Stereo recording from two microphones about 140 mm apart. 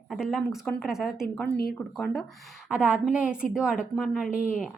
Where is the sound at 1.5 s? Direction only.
90° left.